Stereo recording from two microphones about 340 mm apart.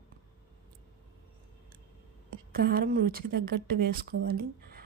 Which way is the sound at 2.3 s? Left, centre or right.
Right.